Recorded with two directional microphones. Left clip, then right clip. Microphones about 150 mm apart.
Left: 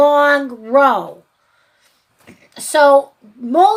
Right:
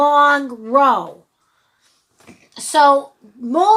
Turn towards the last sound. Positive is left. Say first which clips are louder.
# left 3 dB
turn(degrees=-15)  # may be behind; listen again after turning